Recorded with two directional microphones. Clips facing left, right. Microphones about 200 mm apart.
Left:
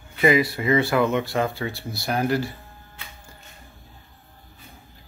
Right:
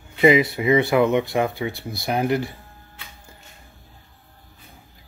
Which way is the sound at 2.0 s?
20° right (ahead or behind).